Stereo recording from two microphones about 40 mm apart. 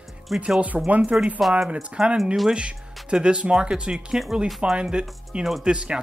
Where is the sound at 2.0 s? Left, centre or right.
Centre.